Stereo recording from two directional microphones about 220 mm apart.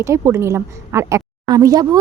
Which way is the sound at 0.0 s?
10° right (ahead or behind).